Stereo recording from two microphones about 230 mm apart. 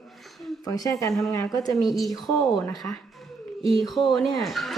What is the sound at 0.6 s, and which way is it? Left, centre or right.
Speech, centre.